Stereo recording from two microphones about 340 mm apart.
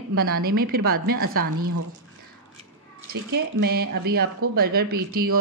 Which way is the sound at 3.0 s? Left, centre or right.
Right.